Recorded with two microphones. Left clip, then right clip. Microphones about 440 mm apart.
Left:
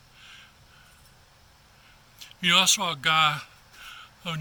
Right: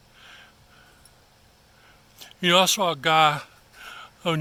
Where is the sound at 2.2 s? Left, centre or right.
Centre.